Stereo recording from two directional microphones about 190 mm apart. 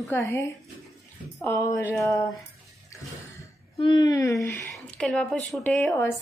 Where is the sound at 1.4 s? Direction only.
15° left (ahead or behind).